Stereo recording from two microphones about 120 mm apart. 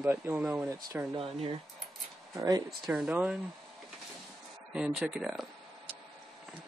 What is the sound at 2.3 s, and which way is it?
Speech, 35° right (ahead or behind).